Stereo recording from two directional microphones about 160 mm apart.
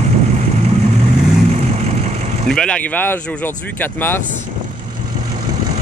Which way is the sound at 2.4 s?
5° left (ahead or behind).